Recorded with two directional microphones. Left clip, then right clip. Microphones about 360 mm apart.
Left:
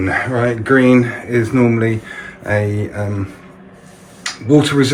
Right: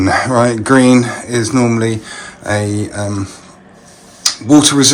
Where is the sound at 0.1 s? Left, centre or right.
Centre.